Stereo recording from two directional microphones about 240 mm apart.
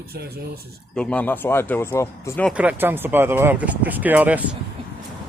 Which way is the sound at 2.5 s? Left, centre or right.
Centre.